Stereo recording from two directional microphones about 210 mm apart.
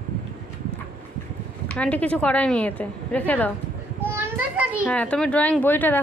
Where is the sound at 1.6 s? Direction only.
5° left (ahead or behind).